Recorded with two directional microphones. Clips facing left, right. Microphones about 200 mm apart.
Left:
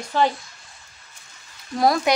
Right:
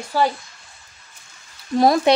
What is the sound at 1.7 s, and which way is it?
Speech, 25° right (ahead or behind).